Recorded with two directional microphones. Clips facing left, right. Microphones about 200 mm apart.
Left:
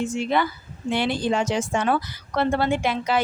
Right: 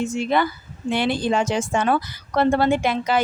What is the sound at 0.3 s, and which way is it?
A woman's voice, 45° right (ahead or behind).